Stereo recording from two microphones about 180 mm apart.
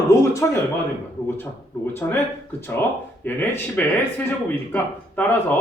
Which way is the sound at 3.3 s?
10° left (ahead or behind).